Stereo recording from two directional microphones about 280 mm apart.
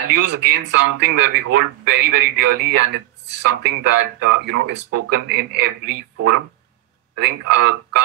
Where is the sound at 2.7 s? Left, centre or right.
Right.